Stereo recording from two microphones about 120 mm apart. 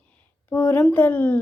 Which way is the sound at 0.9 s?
15° left (ahead or behind).